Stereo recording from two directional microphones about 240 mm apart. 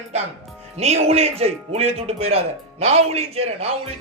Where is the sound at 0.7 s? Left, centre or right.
Right.